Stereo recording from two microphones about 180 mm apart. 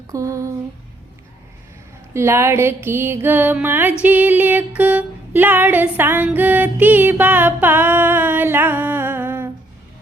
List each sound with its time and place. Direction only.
0.1 s music: 15° right (ahead or behind)
2.1 s music: 15° right (ahead or behind)